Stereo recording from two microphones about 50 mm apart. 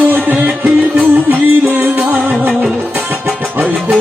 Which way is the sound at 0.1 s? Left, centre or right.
Right.